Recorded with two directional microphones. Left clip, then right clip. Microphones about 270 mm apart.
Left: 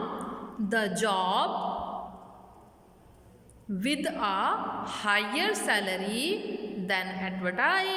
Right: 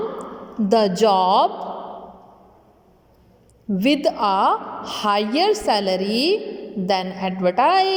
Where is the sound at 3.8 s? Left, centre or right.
Centre.